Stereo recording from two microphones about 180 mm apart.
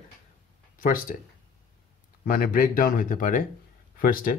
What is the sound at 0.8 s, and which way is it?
Speech, 50° left (ahead or behind).